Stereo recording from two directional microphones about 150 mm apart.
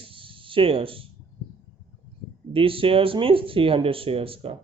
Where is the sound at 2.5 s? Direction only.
35° right (ahead or behind).